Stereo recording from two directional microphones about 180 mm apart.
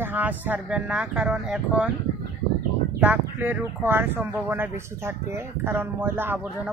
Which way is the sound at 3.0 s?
10° right (ahead or behind).